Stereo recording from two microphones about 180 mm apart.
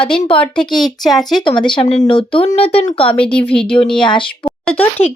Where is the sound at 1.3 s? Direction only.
25° left (ahead or behind).